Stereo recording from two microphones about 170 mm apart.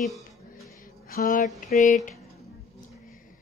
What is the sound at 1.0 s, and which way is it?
Speech, 55° left (ahead or behind).